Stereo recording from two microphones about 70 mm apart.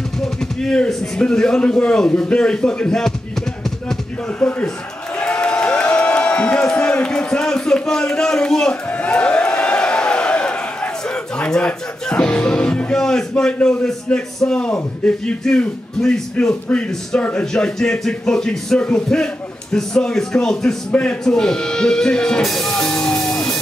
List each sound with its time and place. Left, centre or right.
0.2 s a man's voice: centre
4.4 s a man's voice: centre
5.2 s a sound: centre
14.0 s a man's voice: centre
20.9 s a man's voice: centre